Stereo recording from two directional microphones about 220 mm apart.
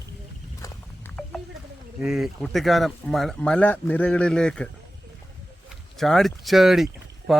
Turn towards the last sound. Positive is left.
turn(degrees=0)  # may be behind; listen again after turning